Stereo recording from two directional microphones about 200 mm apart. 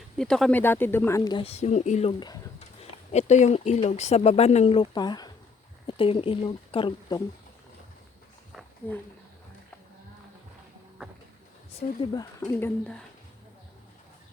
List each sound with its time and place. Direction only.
0.2 s speech: 5° left (ahead or behind); by 2.4 s 20° left (ahead or behind)
3.1 s speech: 35° left (ahead or behind)
11.8 s speech: 40° left (ahead or behind)
12.1 s speech: 15° left (ahead or behind)